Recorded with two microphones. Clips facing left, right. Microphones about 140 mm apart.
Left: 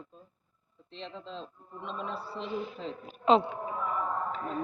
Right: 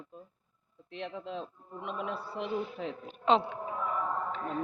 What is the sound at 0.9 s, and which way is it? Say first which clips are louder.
Speech: right 3 dB; 60° right (ahead or behind).